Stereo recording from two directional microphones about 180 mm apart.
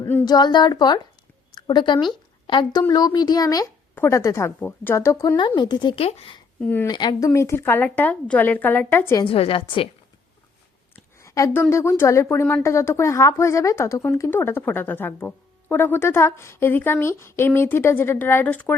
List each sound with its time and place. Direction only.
0.0 s a sound: 10° left (ahead or behind)
0.3 s speech: 25° left (ahead or behind)
6.6 s speech: 10° left (ahead or behind)
6.9 s speech: 25° left (ahead or behind)
9.2 s a woman's voice: 30° left (ahead or behind)
11.2 s a sound: 15° left (ahead or behind)
11.7 s speech: 15° left (ahead or behind)